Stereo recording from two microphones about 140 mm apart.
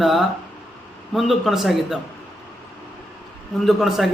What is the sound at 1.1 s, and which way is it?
Speech, centre (ahead or behind).